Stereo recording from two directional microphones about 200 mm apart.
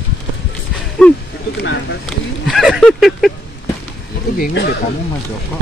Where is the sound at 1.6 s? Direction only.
60° left (ahead or behind).